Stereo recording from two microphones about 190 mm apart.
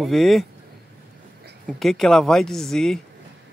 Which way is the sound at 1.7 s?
Centre (ahead or behind).